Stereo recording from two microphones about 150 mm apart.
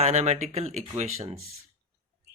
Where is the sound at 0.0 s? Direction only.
50° right (ahead or behind).